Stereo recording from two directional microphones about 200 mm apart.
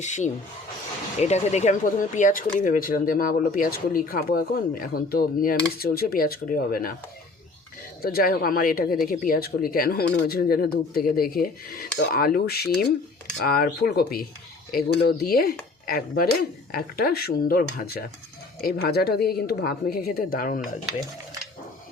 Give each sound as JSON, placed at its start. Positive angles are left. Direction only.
{"t": 0.0, "sound": "speech", "side_deg": 35}
{"t": 8.0, "sound": "speech", "side_deg": 50}